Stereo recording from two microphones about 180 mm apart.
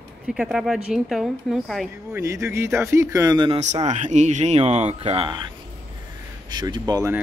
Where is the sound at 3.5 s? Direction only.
40° right (ahead or behind).